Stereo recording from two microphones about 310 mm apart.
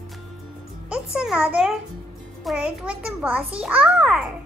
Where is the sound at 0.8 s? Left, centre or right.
Centre.